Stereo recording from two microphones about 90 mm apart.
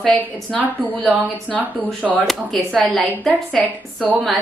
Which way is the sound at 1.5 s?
Centre (ahead or behind).